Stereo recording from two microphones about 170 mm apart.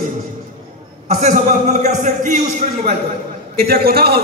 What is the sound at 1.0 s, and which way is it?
A man's voice, 45° right (ahead or behind).